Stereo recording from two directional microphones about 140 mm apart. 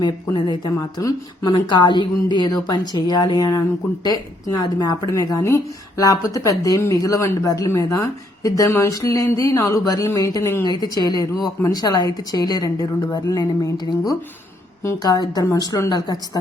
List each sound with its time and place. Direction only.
0.3 s a woman's voice: 35° left (ahead or behind)
14.8 s speech: 25° left (ahead or behind)